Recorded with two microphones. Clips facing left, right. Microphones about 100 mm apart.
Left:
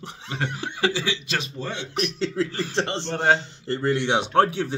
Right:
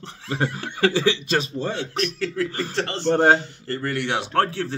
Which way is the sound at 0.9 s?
45° right (ahead or behind).